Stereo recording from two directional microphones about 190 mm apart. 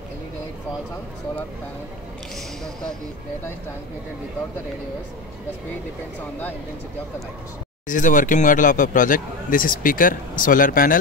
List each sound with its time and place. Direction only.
7.9 s speech: 45° left (ahead or behind)